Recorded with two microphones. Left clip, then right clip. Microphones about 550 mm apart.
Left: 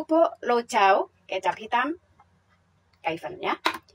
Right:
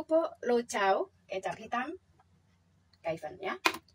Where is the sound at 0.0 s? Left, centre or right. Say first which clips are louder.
Left 7 dB; right.